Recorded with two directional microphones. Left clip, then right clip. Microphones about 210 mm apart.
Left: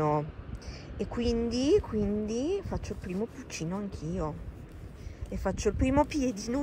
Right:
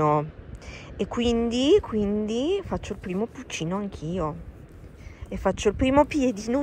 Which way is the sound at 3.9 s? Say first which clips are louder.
Right 5 dB; 30° left (ahead or behind).